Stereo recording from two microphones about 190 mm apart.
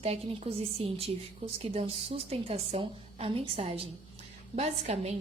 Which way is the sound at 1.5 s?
30° right (ahead or behind).